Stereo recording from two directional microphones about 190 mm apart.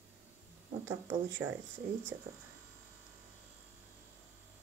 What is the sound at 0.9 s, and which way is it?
Speech, 10° right (ahead or behind).